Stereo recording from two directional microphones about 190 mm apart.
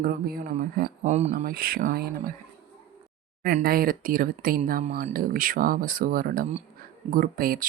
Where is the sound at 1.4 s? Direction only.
50° right (ahead or behind).